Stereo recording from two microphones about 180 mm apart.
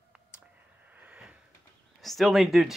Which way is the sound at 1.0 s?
5° right (ahead or behind).